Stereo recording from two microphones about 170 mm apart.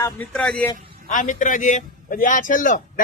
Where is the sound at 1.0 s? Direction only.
50° left (ahead or behind).